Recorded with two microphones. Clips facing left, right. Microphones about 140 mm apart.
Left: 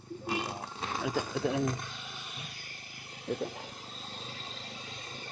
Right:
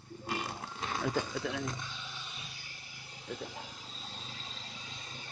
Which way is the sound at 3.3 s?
60° left (ahead or behind).